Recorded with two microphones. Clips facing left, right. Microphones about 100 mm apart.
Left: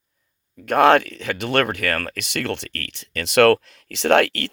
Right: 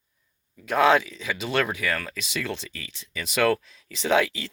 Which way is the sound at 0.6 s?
60° left (ahead or behind).